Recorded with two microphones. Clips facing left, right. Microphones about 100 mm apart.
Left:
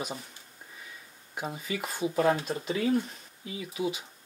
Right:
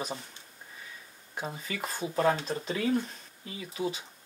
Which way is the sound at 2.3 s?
5° left (ahead or behind).